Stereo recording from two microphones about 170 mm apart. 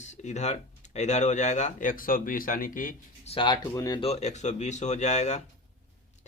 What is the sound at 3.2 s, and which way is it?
Speech, 30° left (ahead or behind).